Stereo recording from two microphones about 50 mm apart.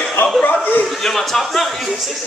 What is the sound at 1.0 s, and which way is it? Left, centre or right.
Speech, centre.